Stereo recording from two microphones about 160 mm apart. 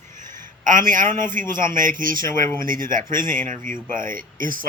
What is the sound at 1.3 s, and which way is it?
Speech, 55° right (ahead or behind).